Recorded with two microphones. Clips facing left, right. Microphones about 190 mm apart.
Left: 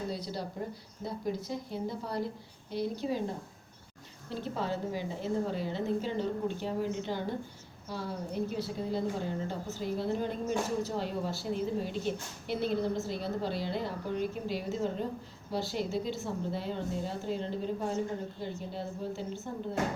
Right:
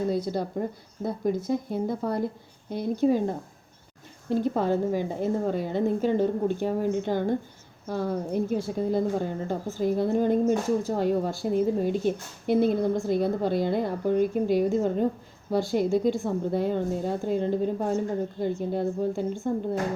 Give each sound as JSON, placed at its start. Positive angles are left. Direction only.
{"t": 0.1, "sound": "a woman's voice", "side_deg": -50}